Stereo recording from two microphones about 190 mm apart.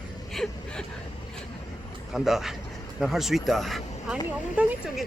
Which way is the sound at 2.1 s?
Centre (ahead or behind).